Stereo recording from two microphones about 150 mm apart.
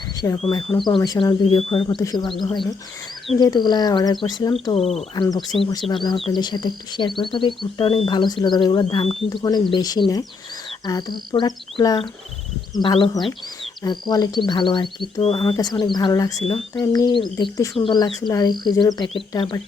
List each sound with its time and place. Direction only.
0.2 s speech: 15° left (ahead or behind)
4.7 s speech: 40° left (ahead or behind)
5.1 s speech: 25° left (ahead or behind)